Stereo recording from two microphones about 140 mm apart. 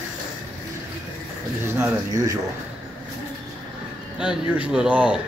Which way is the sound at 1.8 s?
25° right (ahead or behind).